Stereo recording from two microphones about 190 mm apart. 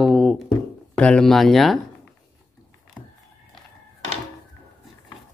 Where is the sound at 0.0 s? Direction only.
Centre (ahead or behind).